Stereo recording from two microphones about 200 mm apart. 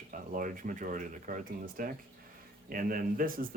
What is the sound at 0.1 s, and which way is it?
Speech, 40° right (ahead or behind).